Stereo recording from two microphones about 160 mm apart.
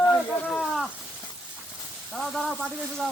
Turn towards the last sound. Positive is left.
turn(degrees=5)  # may be behind; listen again after turning